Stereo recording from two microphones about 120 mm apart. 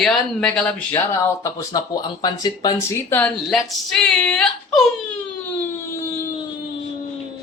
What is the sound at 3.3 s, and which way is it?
A man's voice, centre (ahead or behind).